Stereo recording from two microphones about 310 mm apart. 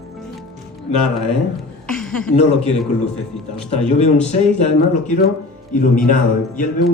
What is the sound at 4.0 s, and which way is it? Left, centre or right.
Speech, left.